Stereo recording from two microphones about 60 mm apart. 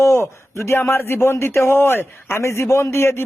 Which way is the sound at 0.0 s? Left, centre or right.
Left.